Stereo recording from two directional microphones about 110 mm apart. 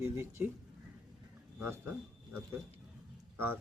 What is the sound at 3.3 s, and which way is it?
Speech, 20° right (ahead or behind).